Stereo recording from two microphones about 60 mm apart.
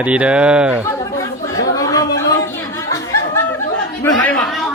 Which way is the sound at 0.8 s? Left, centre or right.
Left.